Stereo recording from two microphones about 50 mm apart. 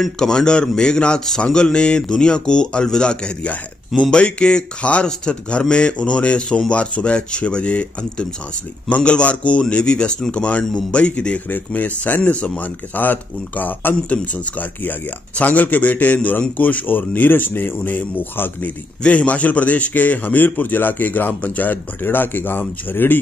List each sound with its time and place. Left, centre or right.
0.0 s speech: centre
12.9 s a man's voice: left
19.0 s a man's voice: left
22.0 s speech: left